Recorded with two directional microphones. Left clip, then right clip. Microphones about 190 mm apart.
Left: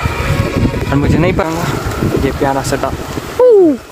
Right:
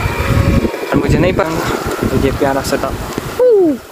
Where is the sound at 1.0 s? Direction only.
Centre (ahead or behind).